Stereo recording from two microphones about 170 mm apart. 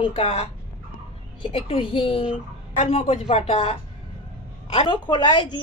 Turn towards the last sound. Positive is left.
turn(degrees=25)  # may be behind; listen again after turning